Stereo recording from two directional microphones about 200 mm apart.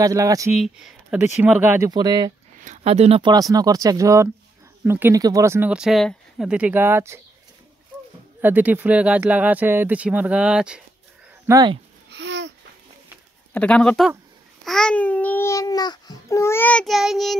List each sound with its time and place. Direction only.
0.0 s speech: 15° right (ahead or behind)
0.6 s speech: centre (ahead or behind)
1.9 s speech: 20° right (ahead or behind)
2.6 s speech: 35° right (ahead or behind); by 7.2 s 10° right (ahead or behind)
8.4 s speech: 10° right (ahead or behind)
11.4 s speech: 20° right (ahead or behind)
12.1 s babbling: 60° right (ahead or behind)
13.5 s speech: 5° left (ahead or behind)
14.6 s babbling: centre (ahead or behind)